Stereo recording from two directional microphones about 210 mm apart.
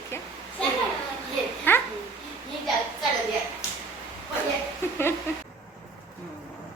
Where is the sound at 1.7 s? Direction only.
10° left (ahead or behind).